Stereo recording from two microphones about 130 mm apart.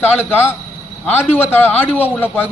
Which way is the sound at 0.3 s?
15° left (ahead or behind).